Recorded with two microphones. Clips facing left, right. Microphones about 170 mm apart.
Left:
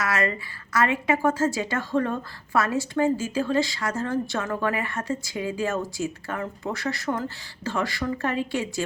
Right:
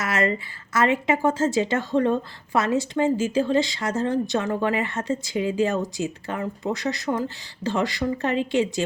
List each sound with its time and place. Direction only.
0.0 s a woman's voice: 25° right (ahead or behind)